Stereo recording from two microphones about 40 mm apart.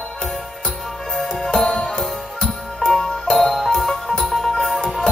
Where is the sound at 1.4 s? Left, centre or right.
Centre.